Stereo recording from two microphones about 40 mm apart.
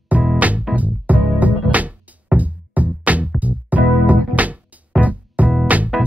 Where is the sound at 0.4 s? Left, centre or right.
Right.